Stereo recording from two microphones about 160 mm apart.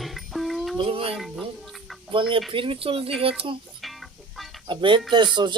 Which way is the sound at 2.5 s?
35° right (ahead or behind).